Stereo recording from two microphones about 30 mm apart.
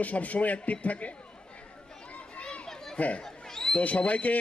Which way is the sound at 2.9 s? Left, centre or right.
Left.